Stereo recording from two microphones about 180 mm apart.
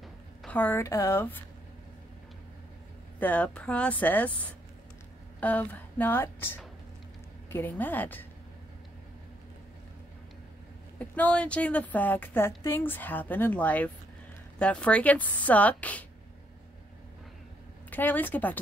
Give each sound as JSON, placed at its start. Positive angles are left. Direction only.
{"t": 0.4, "sound": "a woman's voice", "side_deg": 10}
{"t": 3.2, "sound": "a woman's voice", "side_deg": 10}
{"t": 11.0, "sound": "a woman's voice", "side_deg": 10}
{"t": 17.8, "sound": "a woman's voice", "side_deg": 10}